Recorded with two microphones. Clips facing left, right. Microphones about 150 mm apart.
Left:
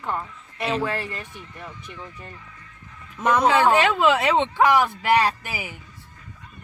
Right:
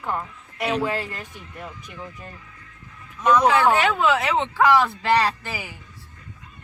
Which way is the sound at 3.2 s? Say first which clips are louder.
Right 2 dB; 50° left (ahead or behind).